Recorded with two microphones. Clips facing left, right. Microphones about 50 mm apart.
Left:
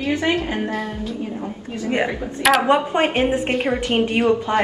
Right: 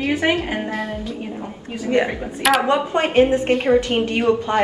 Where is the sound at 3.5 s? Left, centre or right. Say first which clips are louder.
Right 5 dB; centre.